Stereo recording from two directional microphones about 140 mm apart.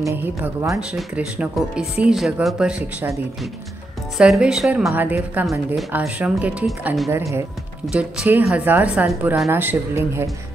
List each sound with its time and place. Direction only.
0.0 s speech: 15° right (ahead or behind)
4.2 s speech: 5° right (ahead or behind)
7.8 s speech: 5° right (ahead or behind)